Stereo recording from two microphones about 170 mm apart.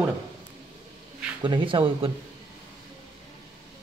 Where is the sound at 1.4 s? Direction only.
30° right (ahead or behind).